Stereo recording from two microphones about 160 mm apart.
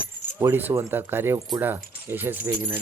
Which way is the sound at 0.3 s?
10° right (ahead or behind).